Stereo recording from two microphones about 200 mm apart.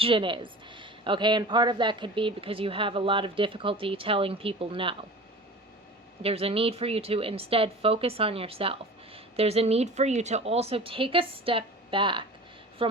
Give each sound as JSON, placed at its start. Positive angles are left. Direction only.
{"t": 0.0, "sound": "speech", "side_deg": -25}
{"t": 6.2, "sound": "speech", "side_deg": -30}